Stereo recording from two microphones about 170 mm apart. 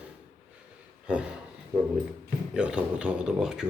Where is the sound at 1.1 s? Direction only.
5° right (ahead or behind).